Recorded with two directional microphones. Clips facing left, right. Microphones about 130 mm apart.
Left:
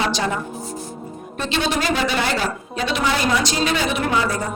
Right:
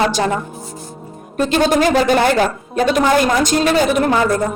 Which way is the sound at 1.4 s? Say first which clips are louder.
Right 8 dB; 45° right (ahead or behind).